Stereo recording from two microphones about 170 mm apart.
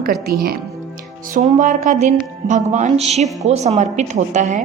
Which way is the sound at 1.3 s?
45° right (ahead or behind).